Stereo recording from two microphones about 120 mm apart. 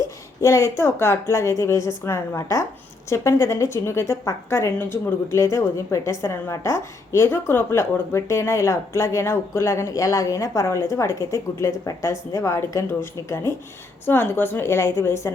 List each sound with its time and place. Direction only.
0.0 s a woman's voice: 25° left (ahead or behind)